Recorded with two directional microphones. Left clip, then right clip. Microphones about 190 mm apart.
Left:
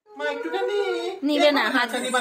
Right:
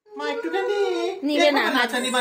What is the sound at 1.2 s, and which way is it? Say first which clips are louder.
Speech: even; 15° left (ahead or behind).